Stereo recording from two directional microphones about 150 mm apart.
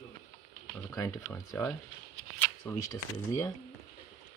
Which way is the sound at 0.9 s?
20° left (ahead or behind).